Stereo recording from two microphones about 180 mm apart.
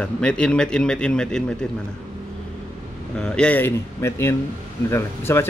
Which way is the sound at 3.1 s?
5° left (ahead or behind).